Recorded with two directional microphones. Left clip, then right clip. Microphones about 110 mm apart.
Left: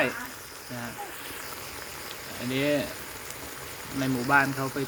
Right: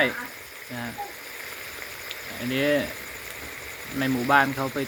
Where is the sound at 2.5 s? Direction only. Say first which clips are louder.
Right 3 dB; centre (ahead or behind).